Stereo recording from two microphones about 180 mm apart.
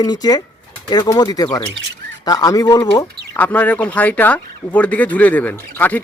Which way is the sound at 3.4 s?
10° left (ahead or behind).